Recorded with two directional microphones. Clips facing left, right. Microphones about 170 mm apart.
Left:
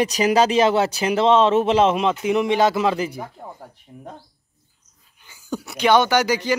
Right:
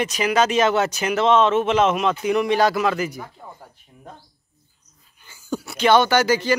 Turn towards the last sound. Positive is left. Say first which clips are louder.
# right 1 dB
turn(degrees=15)  # may be behind; listen again after turning